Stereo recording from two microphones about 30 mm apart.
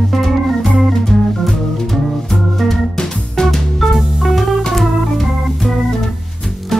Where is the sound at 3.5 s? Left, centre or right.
Centre.